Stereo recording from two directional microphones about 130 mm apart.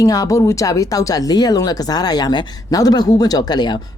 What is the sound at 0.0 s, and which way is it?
Speech, 25° left (ahead or behind).